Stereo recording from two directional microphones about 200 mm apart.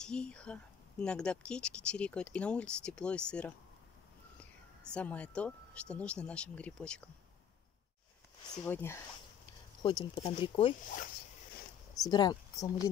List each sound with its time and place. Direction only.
0.0 s speech: 5° left (ahead or behind)
8.6 s speech: 10° left (ahead or behind)
9.8 s speech: 25° left (ahead or behind)
11.9 s speech: 20° left (ahead or behind)